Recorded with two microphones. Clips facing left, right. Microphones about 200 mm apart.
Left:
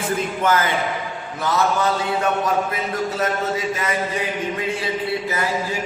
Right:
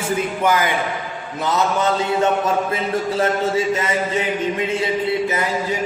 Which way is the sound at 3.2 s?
25° right (ahead or behind).